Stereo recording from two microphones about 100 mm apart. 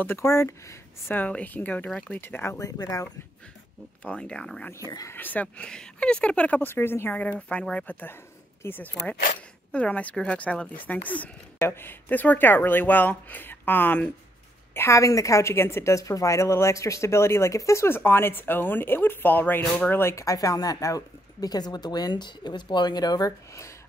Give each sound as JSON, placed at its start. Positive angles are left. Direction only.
{"t": 0.0, "sound": "a woman's voice", "side_deg": 25}
{"t": 4.0, "sound": "speech", "side_deg": 10}
{"t": 4.7, "sound": "speech", "side_deg": 35}
{"t": 5.1, "sound": "a woman's voice", "side_deg": 15}